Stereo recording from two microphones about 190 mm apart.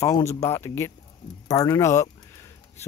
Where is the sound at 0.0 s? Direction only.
15° left (ahead or behind).